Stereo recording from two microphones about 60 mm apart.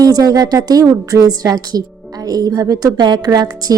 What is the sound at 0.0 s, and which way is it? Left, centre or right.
A woman's voice, right.